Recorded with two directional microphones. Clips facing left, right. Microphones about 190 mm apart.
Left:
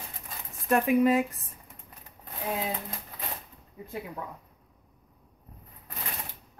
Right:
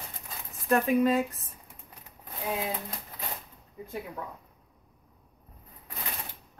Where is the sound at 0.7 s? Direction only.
15° left (ahead or behind).